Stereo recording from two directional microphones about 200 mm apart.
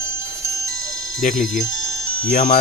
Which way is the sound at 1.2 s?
40° left (ahead or behind).